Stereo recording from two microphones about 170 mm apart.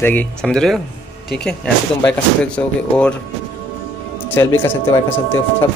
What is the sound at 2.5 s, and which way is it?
Speech, 5° left (ahead or behind).